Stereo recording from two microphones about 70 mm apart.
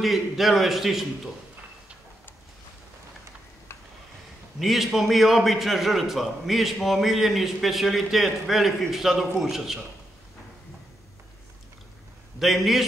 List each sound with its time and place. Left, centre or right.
0.0 s a man's voice: centre
4.6 s a man's voice: centre
12.4 s a man's voice: centre